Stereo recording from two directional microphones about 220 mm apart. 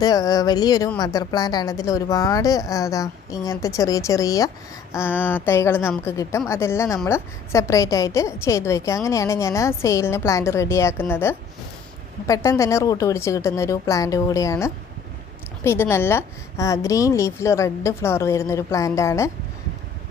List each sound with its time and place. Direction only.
0.0 s a woman's voice: 15° left (ahead or behind)